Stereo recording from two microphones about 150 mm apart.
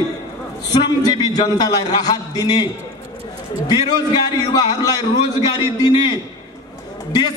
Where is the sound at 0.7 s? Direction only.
25° left (ahead or behind).